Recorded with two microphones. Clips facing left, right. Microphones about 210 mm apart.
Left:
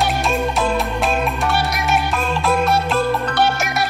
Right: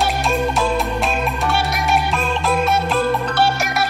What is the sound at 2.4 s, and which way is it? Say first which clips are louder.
Music: left 1 dB; centre (ahead or behind).